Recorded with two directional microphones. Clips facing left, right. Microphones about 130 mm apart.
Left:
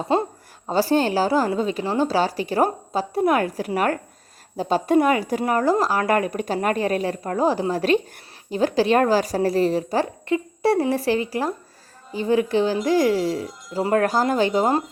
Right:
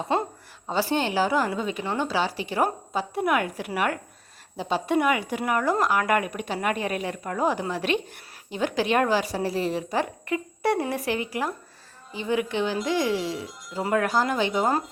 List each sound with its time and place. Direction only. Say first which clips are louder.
0.1 s a woman's voice: left 5 dB; 30° left (ahead or behind)